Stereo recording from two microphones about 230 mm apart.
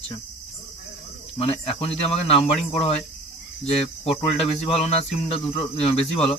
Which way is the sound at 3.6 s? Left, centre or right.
Left.